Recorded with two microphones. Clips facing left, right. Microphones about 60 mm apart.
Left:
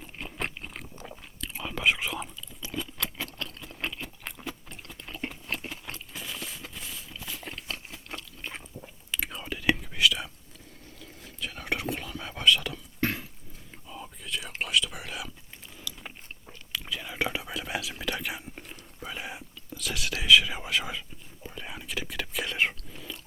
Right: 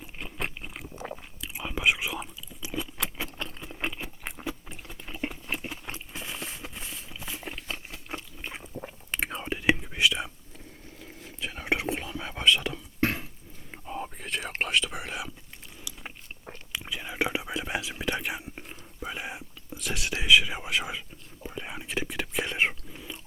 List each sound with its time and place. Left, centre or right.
0.0 s a sound: centre
1.4 s whispering: centre
4.4 s a sound: centre
8.8 s chewing: right
9.4 s whispering: right
13.7 s whispering: right
14.9 s whispering: right
15.9 s biting: centre
16.7 s whispering: centre
22.9 s a sound: centre